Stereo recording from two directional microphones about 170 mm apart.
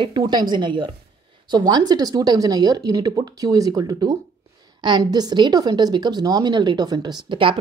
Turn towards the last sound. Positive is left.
turn(degrees=-30)  # may be behind; listen again after turning